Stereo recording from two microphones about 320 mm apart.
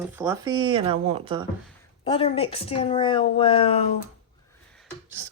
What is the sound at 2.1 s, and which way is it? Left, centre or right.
A woman's voice, centre.